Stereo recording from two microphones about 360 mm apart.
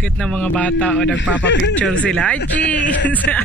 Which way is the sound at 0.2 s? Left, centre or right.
Centre.